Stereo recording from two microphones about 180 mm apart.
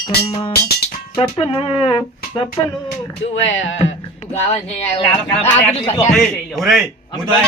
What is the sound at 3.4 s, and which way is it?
Speech, 90° left.